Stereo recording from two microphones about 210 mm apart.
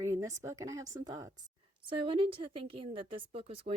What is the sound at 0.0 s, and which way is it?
A woman's voice, 15° right (ahead or behind).